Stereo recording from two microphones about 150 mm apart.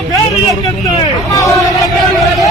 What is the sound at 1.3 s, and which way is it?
Hubbub, 20° left (ahead or behind).